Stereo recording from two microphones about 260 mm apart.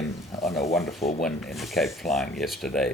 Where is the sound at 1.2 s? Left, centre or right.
Centre.